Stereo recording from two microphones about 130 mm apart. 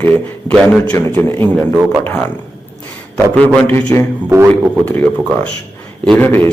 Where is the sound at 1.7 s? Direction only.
15° right (ahead or behind).